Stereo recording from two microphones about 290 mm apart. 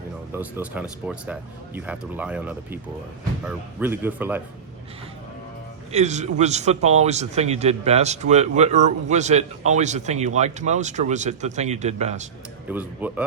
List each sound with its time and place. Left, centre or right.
0.3 s speech: centre
5.9 s speech: right
12.6 s speech: centre